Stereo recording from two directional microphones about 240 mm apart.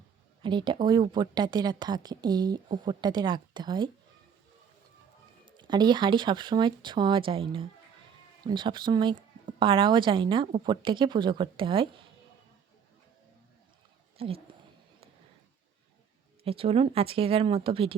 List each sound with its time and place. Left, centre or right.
0.4 s a woman's voice: centre
5.5 s a woman's voice: centre
14.2 s speech: right
16.4 s a woman's voice: right